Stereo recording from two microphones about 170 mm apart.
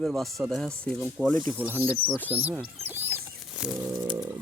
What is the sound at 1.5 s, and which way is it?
Speech, 10° right (ahead or behind).